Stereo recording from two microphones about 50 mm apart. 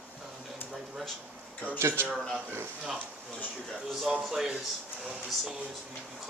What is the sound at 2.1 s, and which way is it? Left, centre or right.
Speech, centre.